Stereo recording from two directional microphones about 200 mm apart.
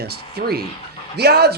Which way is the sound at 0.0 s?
50° right (ahead or behind).